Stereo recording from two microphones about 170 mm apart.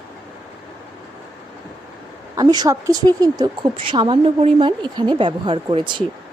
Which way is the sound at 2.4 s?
25° right (ahead or behind).